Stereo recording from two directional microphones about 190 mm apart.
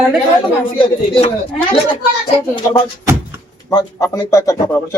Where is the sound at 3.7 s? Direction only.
20° left (ahead or behind).